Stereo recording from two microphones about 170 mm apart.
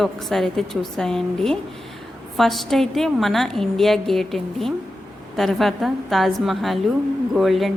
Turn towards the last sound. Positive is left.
turn(degrees=0)  # may be behind; listen again after turning